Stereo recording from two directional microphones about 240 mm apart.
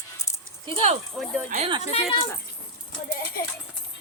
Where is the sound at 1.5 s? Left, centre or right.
Right.